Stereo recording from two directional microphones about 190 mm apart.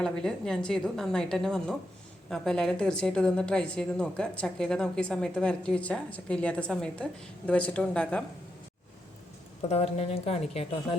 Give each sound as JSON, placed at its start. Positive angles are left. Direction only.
{"t": 0.0, "sound": "a woman's voice", "side_deg": 5}
{"t": 9.6, "sound": "speech", "side_deg": 35}